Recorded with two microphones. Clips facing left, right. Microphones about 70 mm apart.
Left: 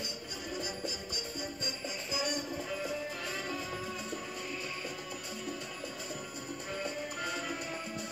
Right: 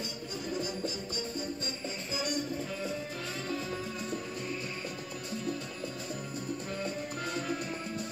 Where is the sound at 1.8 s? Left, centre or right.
Right.